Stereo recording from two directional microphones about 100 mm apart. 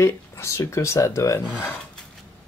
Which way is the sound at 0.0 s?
30° left (ahead or behind).